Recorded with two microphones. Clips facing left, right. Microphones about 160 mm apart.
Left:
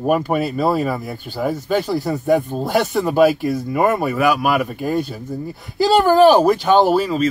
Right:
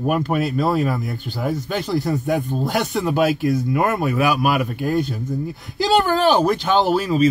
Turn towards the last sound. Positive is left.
turn(degrees=0)  # may be behind; listen again after turning